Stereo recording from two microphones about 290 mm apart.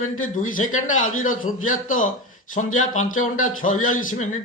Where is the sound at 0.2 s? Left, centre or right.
Left.